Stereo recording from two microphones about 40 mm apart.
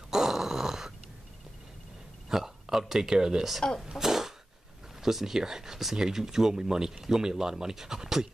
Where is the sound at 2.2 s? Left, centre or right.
Centre.